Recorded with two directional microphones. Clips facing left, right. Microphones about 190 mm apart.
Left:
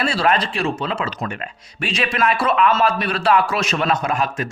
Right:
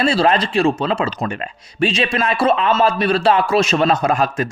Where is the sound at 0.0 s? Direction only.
25° right (ahead or behind).